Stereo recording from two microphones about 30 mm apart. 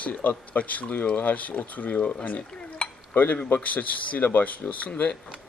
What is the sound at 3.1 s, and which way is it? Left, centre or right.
Speech, left.